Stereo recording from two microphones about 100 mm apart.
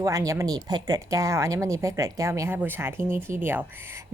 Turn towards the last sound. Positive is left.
turn(degrees=-20)  # may be behind; listen again after turning